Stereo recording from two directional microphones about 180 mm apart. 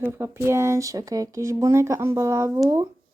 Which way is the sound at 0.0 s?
15° right (ahead or behind).